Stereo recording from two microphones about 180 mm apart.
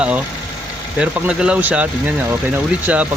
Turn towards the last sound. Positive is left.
turn(degrees=-10)  # may be behind; listen again after turning